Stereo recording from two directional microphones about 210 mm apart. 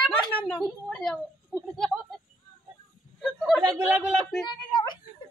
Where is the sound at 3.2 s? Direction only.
Centre (ahead or behind).